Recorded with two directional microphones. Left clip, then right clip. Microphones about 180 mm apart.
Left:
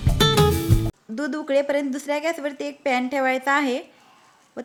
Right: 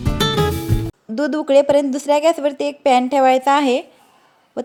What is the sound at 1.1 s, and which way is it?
A woman's voice, 20° right (ahead or behind).